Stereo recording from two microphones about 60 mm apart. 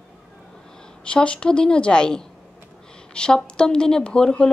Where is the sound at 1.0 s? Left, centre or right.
Centre.